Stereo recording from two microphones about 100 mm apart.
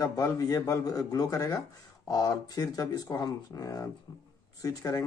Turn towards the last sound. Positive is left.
turn(degrees=40)  # may be behind; listen again after turning